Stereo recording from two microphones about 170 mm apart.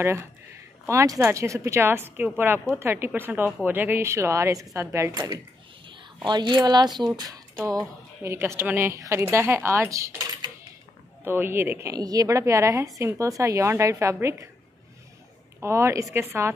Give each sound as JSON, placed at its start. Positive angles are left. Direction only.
{"t": 0.8, "sound": "a woman's voice", "side_deg": -20}
{"t": 15.6, "sound": "speech", "side_deg": -15}